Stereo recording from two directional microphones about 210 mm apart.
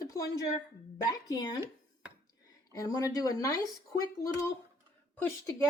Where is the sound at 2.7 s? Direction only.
15° left (ahead or behind).